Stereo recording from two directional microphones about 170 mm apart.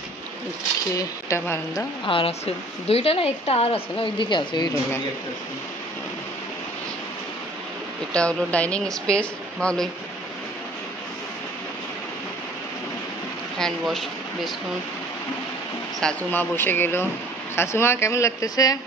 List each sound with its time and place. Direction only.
0.9 s a woman's voice: 15° left (ahead or behind)
2.0 s speech: 35° left (ahead or behind)
8.1 s speech: 5° left (ahead or behind)
13.6 s speech: 5° left (ahead or behind)
16.0 s a woman's voice: 5° left (ahead or behind)